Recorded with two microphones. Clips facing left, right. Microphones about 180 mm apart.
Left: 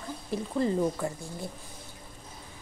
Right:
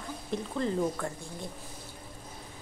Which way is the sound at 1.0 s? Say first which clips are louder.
Left 3 dB; 5° left (ahead or behind).